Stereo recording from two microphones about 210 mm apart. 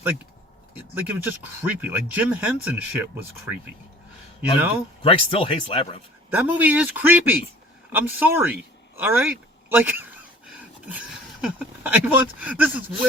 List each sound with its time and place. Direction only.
0.7 s speech: 10° right (ahead or behind)
5.0 s speech: 25° left (ahead or behind)
6.3 s speech: 10° right (ahead or behind)